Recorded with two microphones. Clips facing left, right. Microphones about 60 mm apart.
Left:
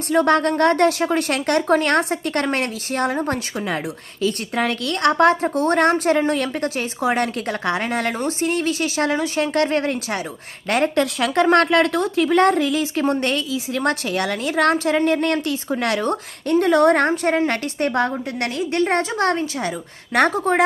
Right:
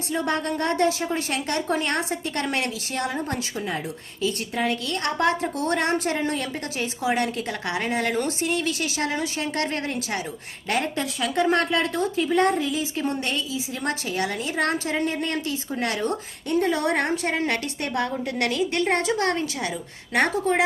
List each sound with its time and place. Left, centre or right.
0.1 s speech: left
2.5 s a woman's voice: left
4.2 s speech: left
5.3 s a woman's voice: left
10.9 s speech: left
11.4 s speech: left
17.1 s a woman's voice: left